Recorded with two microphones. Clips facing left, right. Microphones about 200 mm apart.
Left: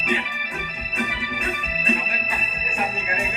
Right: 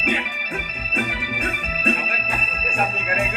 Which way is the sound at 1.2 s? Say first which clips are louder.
Right 1 dB; 50° right (ahead or behind).